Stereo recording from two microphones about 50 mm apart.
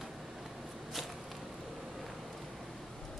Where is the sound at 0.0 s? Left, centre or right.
Centre.